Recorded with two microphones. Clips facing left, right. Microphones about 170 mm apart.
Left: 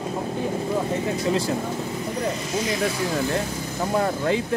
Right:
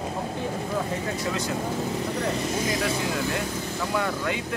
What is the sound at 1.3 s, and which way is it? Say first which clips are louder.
Speech: left 7 dB; 30° left (ahead or behind).